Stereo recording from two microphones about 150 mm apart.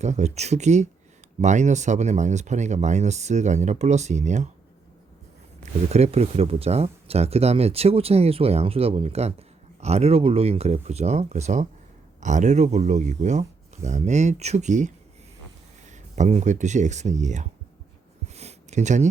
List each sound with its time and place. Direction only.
0.0 s speech: 50° right (ahead or behind)
5.9 s speech: 45° right (ahead or behind)
18.3 s a sound: 50° right (ahead or behind)